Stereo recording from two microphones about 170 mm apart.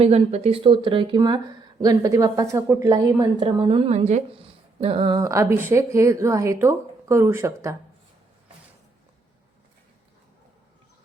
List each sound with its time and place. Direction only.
0.0 s a woman's voice: 40° right (ahead or behind); by 7.8 s 15° right (ahead or behind)